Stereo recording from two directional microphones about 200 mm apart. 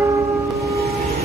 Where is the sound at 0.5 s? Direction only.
15° right (ahead or behind).